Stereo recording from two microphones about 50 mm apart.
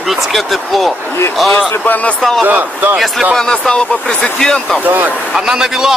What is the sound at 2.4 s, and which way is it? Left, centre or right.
Speech, right.